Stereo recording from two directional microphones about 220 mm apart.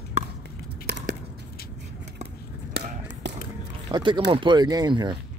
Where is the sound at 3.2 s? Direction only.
55° right (ahead or behind).